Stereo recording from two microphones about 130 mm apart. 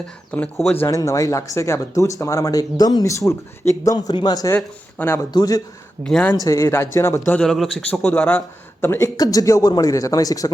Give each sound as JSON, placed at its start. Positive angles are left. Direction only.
{"t": 0.3, "sound": "speech", "side_deg": 10}
{"t": 0.9, "sound": "speech", "side_deg": 25}
{"t": 3.9, "sound": "a man's voice", "side_deg": 35}
{"t": 4.5, "sound": "speech", "side_deg": 15}
{"t": 5.3, "sound": "speech", "side_deg": 30}
{"t": 6.0, "sound": "speech", "side_deg": 10}
{"t": 6.4, "sound": "speech", "side_deg": 20}
{"t": 7.3, "sound": "speech", "side_deg": 5}